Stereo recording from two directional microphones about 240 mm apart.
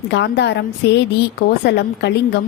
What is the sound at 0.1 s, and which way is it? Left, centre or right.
A woman's voice, left.